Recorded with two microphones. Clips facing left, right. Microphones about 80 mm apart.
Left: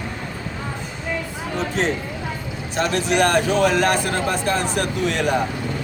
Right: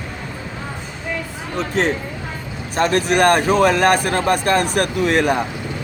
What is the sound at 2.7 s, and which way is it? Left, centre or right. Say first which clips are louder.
Speech: right 3 dB; right.